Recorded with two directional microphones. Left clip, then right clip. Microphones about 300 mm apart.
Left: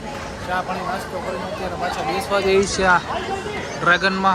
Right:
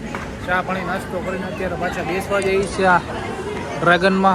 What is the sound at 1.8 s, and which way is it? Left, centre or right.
Speech, left.